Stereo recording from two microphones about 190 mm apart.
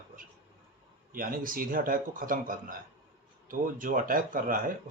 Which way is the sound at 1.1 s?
50° right (ahead or behind).